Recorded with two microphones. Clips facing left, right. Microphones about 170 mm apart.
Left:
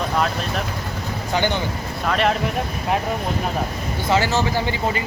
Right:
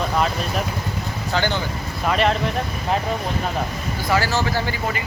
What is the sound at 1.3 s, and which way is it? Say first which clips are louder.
Speech: left 1 dB; 15° left (ahead or behind).